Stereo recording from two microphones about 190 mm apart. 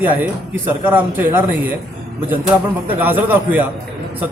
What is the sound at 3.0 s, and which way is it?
Speech, 10° right (ahead or behind).